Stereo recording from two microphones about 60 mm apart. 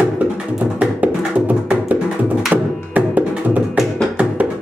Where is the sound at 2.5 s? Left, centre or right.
Right.